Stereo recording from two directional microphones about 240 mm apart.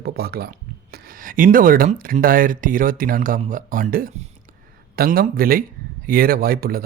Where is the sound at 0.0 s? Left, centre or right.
Right.